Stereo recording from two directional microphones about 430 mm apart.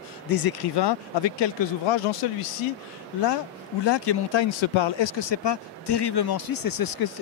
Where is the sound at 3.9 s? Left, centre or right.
Left.